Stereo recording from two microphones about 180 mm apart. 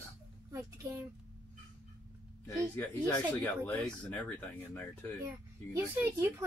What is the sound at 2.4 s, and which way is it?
Speech, 15° left (ahead or behind).